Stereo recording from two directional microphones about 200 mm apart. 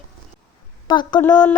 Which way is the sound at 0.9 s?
20° left (ahead or behind).